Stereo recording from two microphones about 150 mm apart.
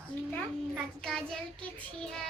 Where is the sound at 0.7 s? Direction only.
5° left (ahead or behind).